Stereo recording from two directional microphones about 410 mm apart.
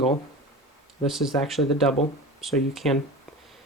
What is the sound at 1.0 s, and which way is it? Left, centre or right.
Speech, centre.